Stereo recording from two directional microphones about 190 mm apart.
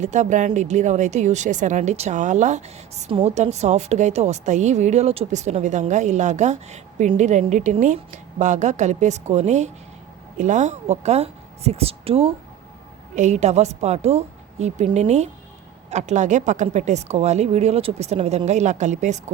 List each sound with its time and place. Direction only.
0.0 s a woman's voice: 40° right (ahead or behind)